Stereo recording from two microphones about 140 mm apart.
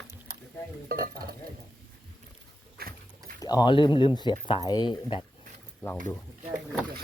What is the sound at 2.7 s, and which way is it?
Dog, 90° right.